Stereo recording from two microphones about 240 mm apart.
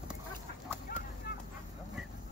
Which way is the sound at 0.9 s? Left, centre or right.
Left.